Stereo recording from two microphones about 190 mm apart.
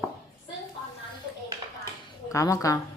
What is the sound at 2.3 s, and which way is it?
Speech, 15° left (ahead or behind).